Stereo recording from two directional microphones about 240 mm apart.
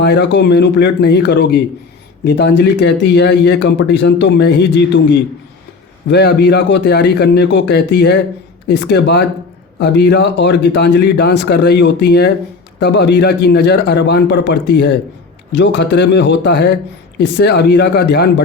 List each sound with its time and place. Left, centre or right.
0.0 s speech: left
6.1 s speech: left